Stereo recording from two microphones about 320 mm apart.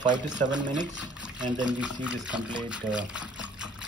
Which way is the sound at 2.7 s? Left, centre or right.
Centre.